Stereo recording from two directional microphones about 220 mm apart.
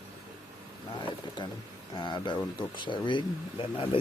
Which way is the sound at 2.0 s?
20° left (ahead or behind).